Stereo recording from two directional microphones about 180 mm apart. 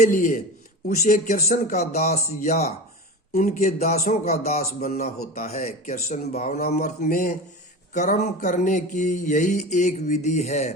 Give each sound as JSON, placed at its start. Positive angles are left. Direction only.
{"t": 0.0, "sound": "music", "side_deg": 50}
{"t": 3.3, "sound": "a man's voice", "side_deg": 45}
{"t": 5.2, "sound": "speech", "side_deg": 55}
{"t": 5.5, "sound": "a man's voice", "side_deg": 40}
{"t": 6.7, "sound": "music", "side_deg": 45}